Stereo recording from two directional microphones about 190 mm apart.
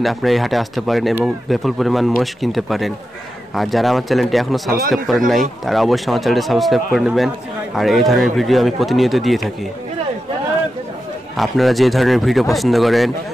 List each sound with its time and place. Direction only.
0.0 s speech: centre (ahead or behind)
4.6 s speech: 50° right (ahead or behind)
4.9 s speech: centre (ahead or behind)
11.3 s speech: centre (ahead or behind)